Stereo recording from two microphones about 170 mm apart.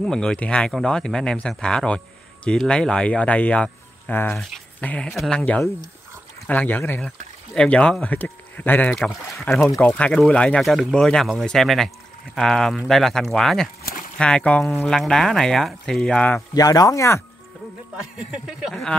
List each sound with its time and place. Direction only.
0.0 s speech: 5° left (ahead or behind)
16.5 s speech: 20° left (ahead or behind)
18.1 s speech: 5° right (ahead or behind)